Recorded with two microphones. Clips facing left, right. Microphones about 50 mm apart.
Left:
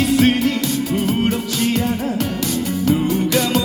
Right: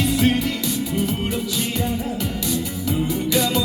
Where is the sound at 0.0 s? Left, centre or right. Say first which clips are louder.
Left 4 dB; left.